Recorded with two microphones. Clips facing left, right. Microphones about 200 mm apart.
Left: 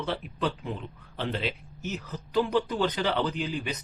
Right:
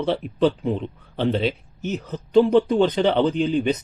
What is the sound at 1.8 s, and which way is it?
Speech, 30° right (ahead or behind).